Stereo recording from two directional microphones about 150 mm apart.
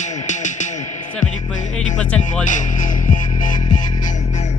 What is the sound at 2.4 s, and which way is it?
Music, 60° left (ahead or behind).